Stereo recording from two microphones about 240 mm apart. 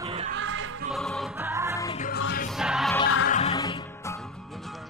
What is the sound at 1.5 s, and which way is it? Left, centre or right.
Music, centre.